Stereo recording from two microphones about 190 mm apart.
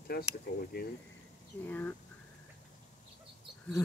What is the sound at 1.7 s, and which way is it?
Speech, 10° left (ahead or behind).